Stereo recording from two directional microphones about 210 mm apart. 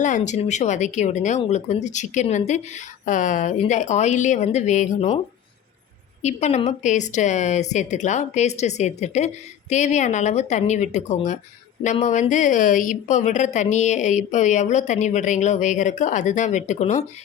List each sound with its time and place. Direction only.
0.0 s a woman's voice: 35° left (ahead or behind)
6.2 s a woman's voice: 30° left (ahead or behind)